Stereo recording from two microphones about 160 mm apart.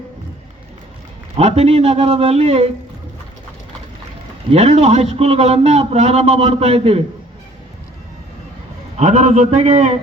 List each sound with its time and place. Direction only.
1.4 s a man's voice: 40° right (ahead or behind)
4.4 s a man's voice: 40° right (ahead or behind)
9.0 s a man's voice: 45° right (ahead or behind)